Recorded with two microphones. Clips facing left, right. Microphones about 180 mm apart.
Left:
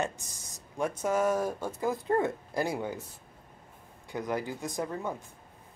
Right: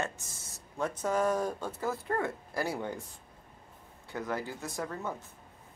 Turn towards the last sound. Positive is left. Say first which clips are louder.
# left 3 dB
turn(degrees=15)  # may be behind; listen again after turning